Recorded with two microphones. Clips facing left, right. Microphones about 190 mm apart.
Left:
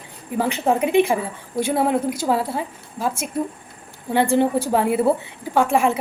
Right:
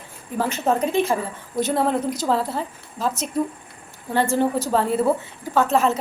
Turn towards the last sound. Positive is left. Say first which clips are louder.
# left 1 dB
turn(degrees=10)  # may be behind; listen again after turning